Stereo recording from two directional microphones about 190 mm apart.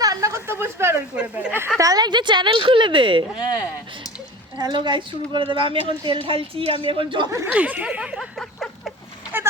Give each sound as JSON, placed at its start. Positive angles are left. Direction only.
{"t": 0.0, "sound": "speech", "side_deg": -20}
{"t": 1.8, "sound": "a woman's voice", "side_deg": -20}
{"t": 4.5, "sound": "a woman's voice", "side_deg": -25}
{"t": 7.4, "sound": "speech", "side_deg": -10}
{"t": 9.3, "sound": "a sound", "side_deg": -10}